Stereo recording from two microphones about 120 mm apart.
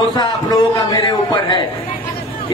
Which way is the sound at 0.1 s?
35° left (ahead or behind).